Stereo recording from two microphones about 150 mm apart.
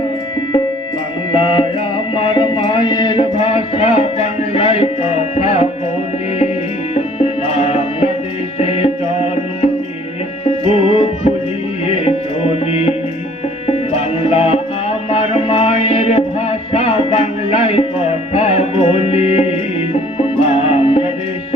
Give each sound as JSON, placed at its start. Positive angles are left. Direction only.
{"t": 1.3, "sound": "music", "side_deg": 35}
{"t": 6.9, "sound": "music", "side_deg": 45}
{"t": 10.7, "sound": "music", "side_deg": 40}
{"t": 13.9, "sound": "music", "side_deg": 40}